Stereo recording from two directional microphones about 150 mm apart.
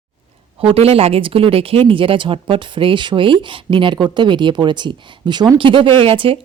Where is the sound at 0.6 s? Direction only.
40° right (ahead or behind).